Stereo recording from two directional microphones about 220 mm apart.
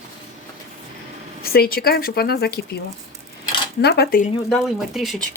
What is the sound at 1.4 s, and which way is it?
Speech, 45° left (ahead or behind).